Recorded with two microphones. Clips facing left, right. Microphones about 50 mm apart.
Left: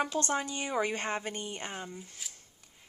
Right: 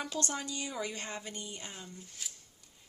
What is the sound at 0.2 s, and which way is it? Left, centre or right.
Speech, left.